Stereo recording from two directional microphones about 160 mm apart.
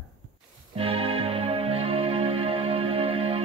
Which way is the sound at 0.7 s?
35° right (ahead or behind).